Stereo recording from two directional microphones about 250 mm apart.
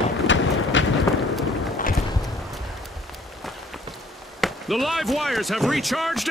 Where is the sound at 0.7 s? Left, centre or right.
Left.